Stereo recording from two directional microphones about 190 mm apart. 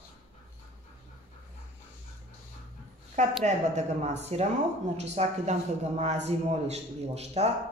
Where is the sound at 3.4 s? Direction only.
35° right (ahead or behind).